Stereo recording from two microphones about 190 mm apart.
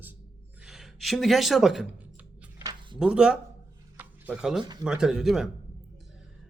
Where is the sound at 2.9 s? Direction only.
5° right (ahead or behind).